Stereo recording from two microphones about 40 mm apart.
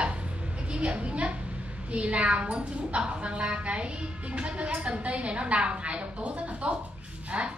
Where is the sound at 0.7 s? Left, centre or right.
Right.